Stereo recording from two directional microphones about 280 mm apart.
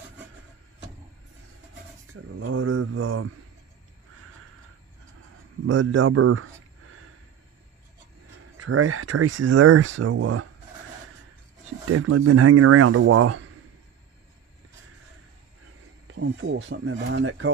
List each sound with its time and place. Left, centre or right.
2.3 s speech: right
5.7 s a man's voice: right
8.5 s speech: right
9.8 s speech: right
10.2 s speech: right
11.9 s speech: right
16.1 s speech: right